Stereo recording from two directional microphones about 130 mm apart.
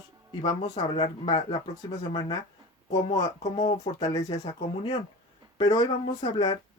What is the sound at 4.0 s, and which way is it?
Speech, 30° left (ahead or behind).